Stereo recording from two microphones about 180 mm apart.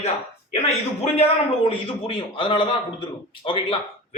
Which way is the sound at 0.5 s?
35° left (ahead or behind).